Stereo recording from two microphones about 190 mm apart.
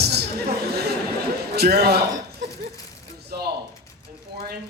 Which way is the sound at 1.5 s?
55° right (ahead or behind).